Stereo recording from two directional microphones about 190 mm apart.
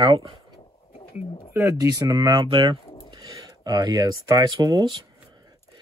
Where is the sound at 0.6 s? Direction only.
30° left (ahead or behind).